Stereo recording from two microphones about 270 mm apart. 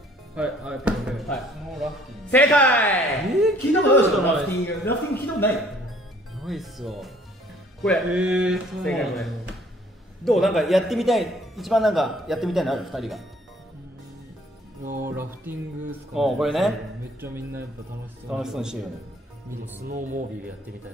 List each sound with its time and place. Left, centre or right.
0.4 s a man's voice: centre
15.0 s a sound: centre
16.2 s a man's voice: centre
17.2 s a sound: centre
18.3 s a man's voice: centre
19.6 s speech: right